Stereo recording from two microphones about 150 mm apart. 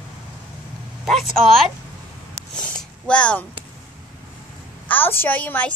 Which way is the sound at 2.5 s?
5° left (ahead or behind).